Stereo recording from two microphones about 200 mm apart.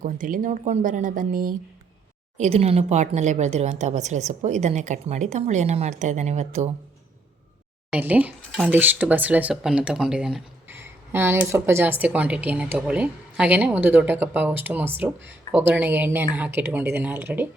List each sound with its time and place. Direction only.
0.0 s a woman's voice: 40° right (ahead or behind)
2.4 s a woman's voice: 30° right (ahead or behind)
7.9 s speech: 5° right (ahead or behind)